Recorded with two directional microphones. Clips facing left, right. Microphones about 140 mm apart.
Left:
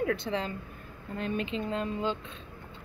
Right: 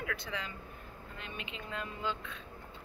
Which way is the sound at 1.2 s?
40° left (ahead or behind).